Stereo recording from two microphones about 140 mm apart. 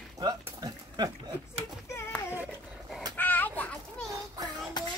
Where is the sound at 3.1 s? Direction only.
15° left (ahead or behind).